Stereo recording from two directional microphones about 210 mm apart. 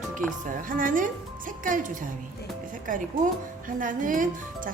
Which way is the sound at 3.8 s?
40° right (ahead or behind).